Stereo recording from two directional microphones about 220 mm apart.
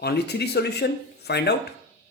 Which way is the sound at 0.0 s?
45° left (ahead or behind).